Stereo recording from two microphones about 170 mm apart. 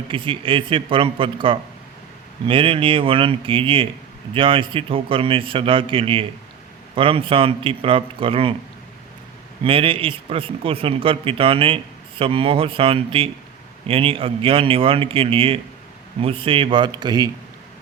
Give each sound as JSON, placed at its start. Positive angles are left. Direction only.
{"t": 0.1, "sound": "speech", "side_deg": -30}
{"t": 9.6, "sound": "speech", "side_deg": -30}